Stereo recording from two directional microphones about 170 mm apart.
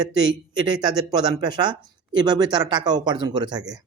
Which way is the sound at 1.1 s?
25° right (ahead or behind).